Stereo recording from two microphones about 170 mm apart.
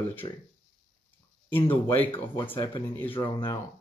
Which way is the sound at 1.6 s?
10° left (ahead or behind).